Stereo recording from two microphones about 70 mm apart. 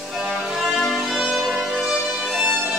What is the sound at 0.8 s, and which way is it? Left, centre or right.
Music, centre.